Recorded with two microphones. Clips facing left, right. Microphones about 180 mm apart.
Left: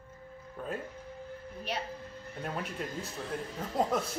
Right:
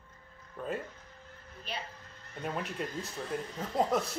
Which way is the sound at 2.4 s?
Centre (ahead or behind).